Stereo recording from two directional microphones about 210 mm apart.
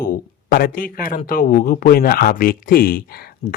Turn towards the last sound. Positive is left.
turn(degrees=45)  # may be behind; listen again after turning